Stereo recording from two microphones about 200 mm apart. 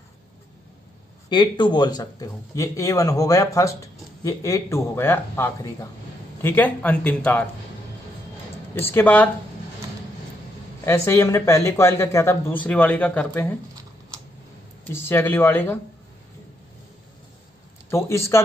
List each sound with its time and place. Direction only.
1.3 s speech: 20° left (ahead or behind); by 7.4 s 5° left (ahead or behind)
8.7 s speech: 10° left (ahead or behind)
10.9 s speech: 15° left (ahead or behind)
14.9 s speech: 10° left (ahead or behind)
17.8 s speech: 15° left (ahead or behind)